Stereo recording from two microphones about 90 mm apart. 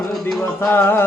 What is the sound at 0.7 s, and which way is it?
Speech, 25° left (ahead or behind).